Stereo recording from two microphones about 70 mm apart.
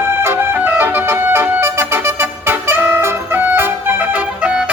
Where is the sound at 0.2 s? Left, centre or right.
Right.